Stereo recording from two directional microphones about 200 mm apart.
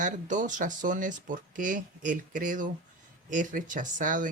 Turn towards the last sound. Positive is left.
turn(degrees=-40)  # may be behind; listen again after turning